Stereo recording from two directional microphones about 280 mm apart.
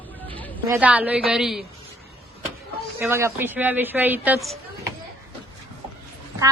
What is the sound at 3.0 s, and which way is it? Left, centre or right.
A woman's voice, centre.